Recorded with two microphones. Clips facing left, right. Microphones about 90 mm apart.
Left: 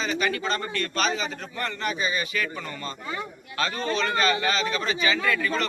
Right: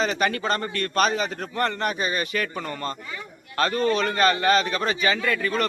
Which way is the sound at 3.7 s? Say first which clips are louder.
Right 6 dB; 25° left (ahead or behind).